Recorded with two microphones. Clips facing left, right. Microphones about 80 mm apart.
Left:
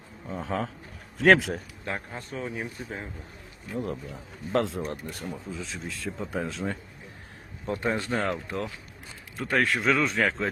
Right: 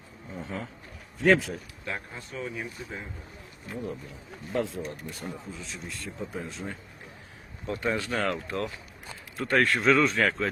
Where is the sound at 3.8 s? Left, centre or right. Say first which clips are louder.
Left 2 dB; left.